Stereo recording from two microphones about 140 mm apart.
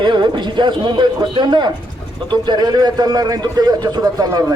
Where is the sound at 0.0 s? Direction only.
35° right (ahead or behind).